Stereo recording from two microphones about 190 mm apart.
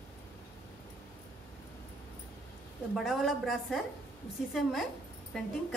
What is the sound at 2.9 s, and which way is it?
A woman's voice, centre (ahead or behind).